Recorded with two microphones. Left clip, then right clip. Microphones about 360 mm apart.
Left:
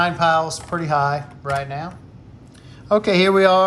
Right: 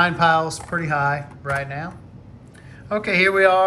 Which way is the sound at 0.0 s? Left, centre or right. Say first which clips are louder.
Even; centre.